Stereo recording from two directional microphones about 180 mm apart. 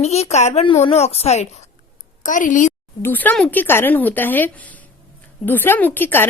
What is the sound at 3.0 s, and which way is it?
Speech, 10° left (ahead or behind).